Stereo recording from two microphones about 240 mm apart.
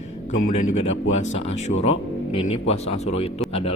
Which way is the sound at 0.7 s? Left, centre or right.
Left.